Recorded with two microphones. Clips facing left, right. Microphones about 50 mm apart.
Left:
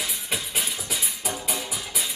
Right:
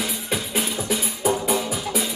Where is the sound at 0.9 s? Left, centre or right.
Right.